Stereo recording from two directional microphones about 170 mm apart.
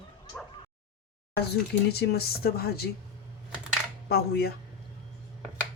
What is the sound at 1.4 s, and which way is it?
Speech, 70° left (ahead or behind).